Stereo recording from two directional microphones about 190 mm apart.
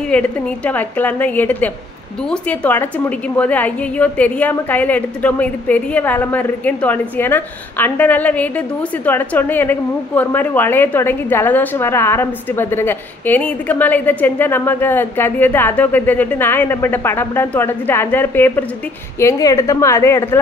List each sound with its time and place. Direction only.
0.1 s a woman's voice: 10° left (ahead or behind)